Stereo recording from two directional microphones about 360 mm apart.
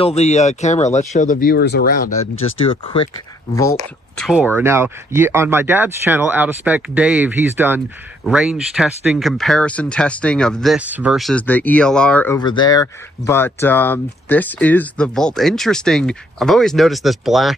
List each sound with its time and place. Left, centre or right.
0.0 s speech: centre
2.6 s speech: centre
4.2 s speech: centre